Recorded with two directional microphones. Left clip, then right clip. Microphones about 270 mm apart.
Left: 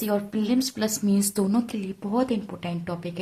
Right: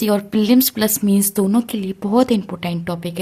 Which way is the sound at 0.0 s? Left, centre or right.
Right.